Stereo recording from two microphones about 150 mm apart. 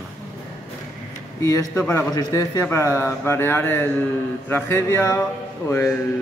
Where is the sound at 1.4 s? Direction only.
20° left (ahead or behind).